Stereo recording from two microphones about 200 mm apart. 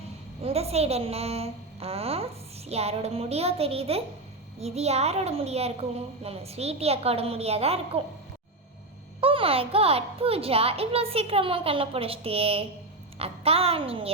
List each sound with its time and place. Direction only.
0.4 s a woman's voice: 30° right (ahead or behind)
9.2 s a woman's voice: 30° right (ahead or behind)